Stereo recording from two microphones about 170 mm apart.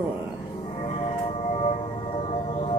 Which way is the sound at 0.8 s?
35° left (ahead or behind).